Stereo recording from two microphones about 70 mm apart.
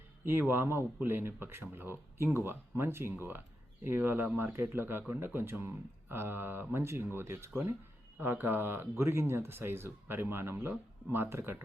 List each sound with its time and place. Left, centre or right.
0.3 s speech: right